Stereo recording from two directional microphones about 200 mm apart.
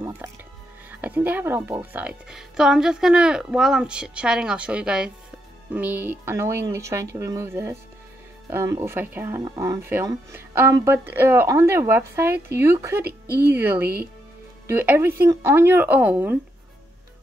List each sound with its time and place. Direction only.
1.0 s a woman's voice: 10° right (ahead or behind)
13.0 s speech: 50° right (ahead or behind)
13.5 s speech: 10° right (ahead or behind)